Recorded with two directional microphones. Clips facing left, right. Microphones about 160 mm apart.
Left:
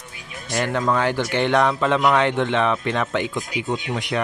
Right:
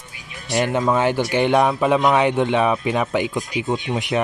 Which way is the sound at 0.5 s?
15° right (ahead or behind).